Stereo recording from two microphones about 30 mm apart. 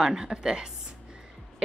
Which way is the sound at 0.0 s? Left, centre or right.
Right.